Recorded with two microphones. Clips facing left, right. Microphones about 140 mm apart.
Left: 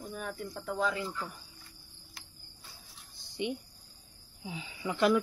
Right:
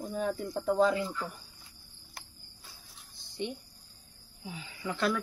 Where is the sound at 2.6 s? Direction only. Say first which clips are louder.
Even; centre (ahead or behind).